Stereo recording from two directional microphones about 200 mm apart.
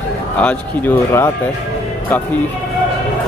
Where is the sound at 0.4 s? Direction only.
5° left (ahead or behind).